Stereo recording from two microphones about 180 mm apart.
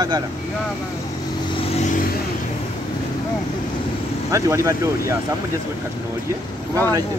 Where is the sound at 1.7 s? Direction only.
40° left (ahead or behind).